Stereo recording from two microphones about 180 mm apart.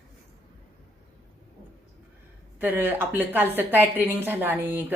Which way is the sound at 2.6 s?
10° right (ahead or behind).